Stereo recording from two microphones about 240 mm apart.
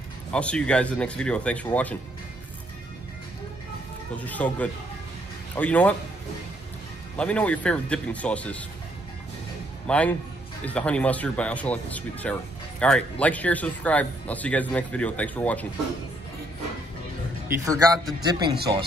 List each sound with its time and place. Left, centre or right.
0.3 s speech: centre
4.2 s speech: centre
7.2 s speech: centre
9.8 s speech: centre
17.6 s speech: centre